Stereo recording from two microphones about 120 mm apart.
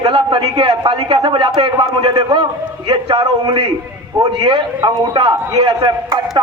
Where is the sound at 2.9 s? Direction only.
50° right (ahead or behind).